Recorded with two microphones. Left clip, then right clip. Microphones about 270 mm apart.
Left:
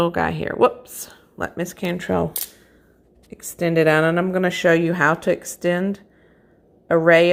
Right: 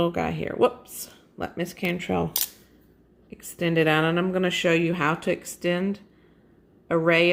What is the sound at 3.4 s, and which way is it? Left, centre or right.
A woman's voice, centre.